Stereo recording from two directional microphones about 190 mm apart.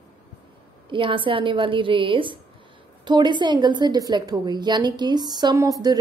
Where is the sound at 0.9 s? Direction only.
25° right (ahead or behind).